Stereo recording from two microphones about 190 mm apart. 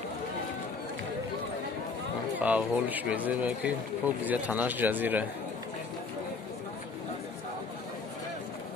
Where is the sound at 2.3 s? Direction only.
10° right (ahead or behind).